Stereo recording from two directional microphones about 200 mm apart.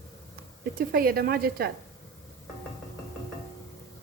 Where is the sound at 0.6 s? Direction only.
45° right (ahead or behind).